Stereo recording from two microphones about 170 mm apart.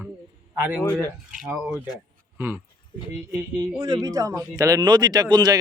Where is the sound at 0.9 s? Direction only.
15° left (ahead or behind).